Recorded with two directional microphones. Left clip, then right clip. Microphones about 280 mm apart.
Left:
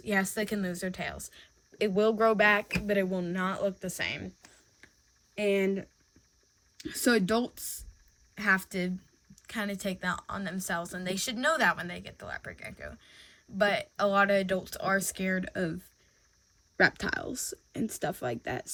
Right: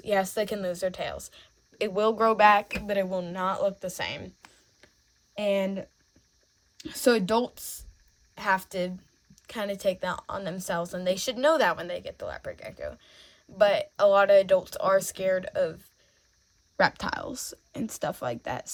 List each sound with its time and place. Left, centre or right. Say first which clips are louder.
0.1 s a woman's voice: right 4 dB; centre
5.3 s a woman's voice: right 1 dB; centre
16.7 s speech: right 1 dB; centre